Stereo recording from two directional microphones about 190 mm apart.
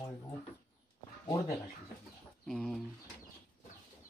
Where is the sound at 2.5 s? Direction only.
Centre (ahead or behind).